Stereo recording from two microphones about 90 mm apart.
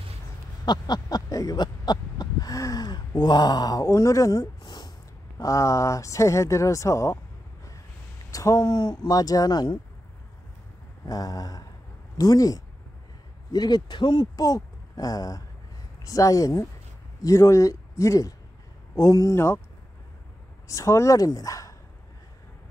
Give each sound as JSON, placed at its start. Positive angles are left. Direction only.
{"t": 0.7, "sound": "a sound", "side_deg": 50}
{"t": 5.4, "sound": "speech", "side_deg": 35}
{"t": 8.3, "sound": "speech", "side_deg": 40}
{"t": 11.1, "sound": "speech", "side_deg": 45}
{"t": 19.3, "sound": "speech", "side_deg": 30}
{"t": 20.6, "sound": "speech", "side_deg": 35}